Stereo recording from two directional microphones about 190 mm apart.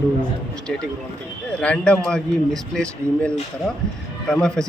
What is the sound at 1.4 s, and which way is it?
A man's voice, 5° left (ahead or behind).